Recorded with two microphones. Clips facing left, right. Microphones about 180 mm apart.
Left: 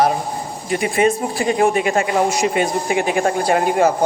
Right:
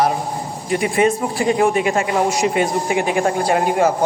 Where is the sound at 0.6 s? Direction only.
25° right (ahead or behind).